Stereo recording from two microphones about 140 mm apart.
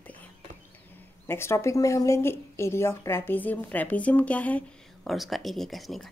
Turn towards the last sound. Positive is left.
turn(degrees=0)  # may be behind; listen again after turning